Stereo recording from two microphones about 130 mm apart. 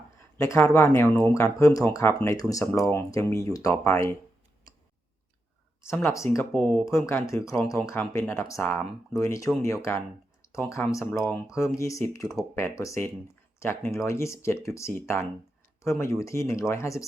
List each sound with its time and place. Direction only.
0.3 s speech: 20° left (ahead or behind)
5.8 s speech: 20° left (ahead or behind)
6.5 s speech: 10° left (ahead or behind)
6.8 s speech: 20° left (ahead or behind)